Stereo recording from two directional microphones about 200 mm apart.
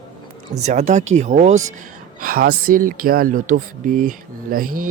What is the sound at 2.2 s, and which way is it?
Speech, 45° right (ahead or behind).